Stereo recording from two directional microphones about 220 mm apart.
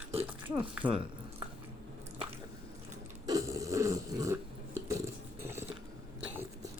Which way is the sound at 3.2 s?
15° right (ahead or behind).